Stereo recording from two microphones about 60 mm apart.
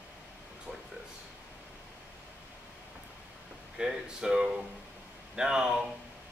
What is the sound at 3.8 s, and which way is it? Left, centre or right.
A man's voice, centre.